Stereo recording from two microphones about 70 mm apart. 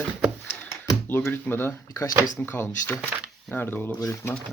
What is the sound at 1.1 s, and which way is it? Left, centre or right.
Speech, left.